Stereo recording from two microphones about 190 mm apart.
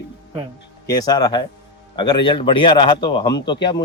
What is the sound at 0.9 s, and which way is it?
A man's voice, 20° left (ahead or behind).